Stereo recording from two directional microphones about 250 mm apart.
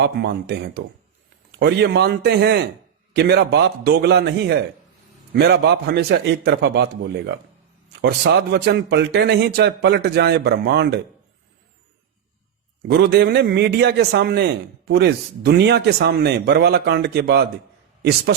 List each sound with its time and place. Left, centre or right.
0.0 s a man's voice: right
12.9 s a man's voice: right